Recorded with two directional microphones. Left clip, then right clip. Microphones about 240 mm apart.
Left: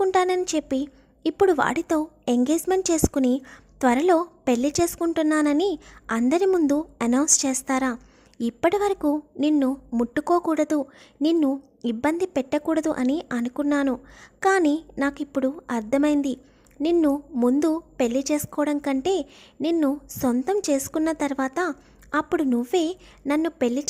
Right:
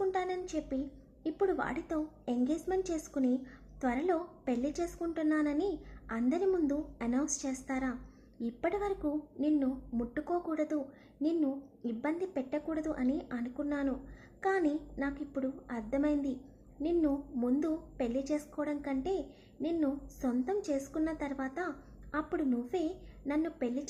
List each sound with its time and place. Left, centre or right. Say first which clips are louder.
0.0 s a woman's voice: left 13 dB; left